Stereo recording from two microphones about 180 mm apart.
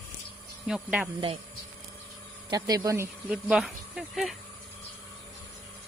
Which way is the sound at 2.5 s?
20° right (ahead or behind).